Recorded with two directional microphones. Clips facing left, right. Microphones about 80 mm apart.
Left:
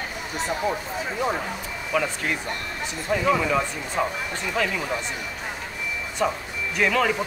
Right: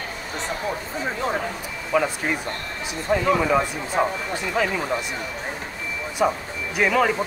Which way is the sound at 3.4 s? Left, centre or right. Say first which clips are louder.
Right 3 dB; centre.